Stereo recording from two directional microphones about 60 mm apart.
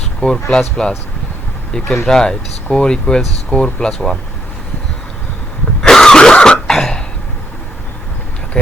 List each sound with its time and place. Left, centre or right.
0.2 s speech: centre
2.0 s speech: centre
5.8 s throat clearing: centre